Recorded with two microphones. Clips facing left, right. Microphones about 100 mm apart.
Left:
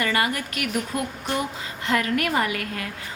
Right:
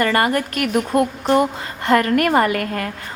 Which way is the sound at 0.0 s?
45° right (ahead or behind).